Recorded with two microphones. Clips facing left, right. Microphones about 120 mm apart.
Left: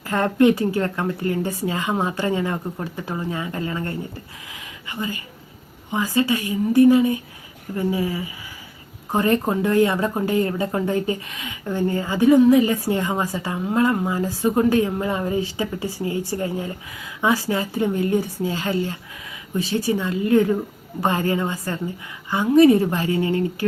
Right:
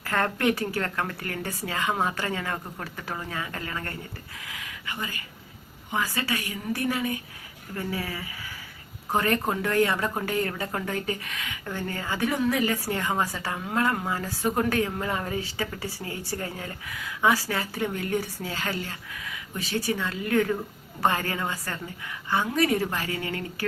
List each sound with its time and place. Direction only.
0.0 s a woman's voice: 20° left (ahead or behind)
4.5 s a sound: 20° left (ahead or behind)
5.9 s a woman's voice: 20° left (ahead or behind)